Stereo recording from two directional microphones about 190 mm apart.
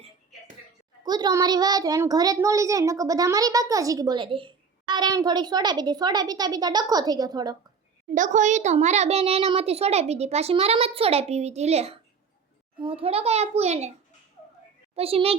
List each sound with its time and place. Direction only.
1.0 s a child's voice: 20° right (ahead or behind)
8.1 s a child's voice: 40° right (ahead or behind)
14.9 s a child's voice: 30° right (ahead or behind)